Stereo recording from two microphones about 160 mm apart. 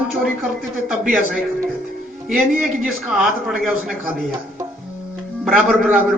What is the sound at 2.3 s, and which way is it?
A man's voice, 5° right (ahead or behind).